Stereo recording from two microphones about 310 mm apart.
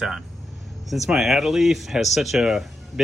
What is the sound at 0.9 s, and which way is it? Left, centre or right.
Speech, centre.